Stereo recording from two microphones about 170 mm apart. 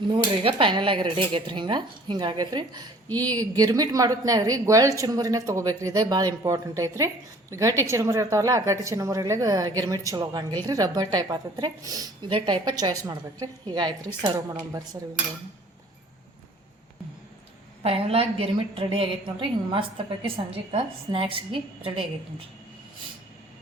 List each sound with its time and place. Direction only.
0.1 s a woman's voice: 30° right (ahead or behind)
17.8 s a woman's voice: 35° right (ahead or behind)